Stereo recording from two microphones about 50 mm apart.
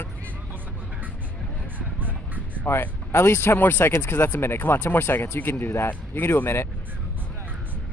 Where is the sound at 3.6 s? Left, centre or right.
Left.